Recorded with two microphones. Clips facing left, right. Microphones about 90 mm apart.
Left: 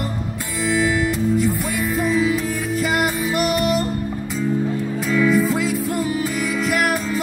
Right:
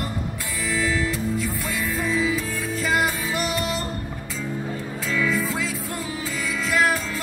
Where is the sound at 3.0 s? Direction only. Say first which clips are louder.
Left 4 dB; 5° left (ahead or behind).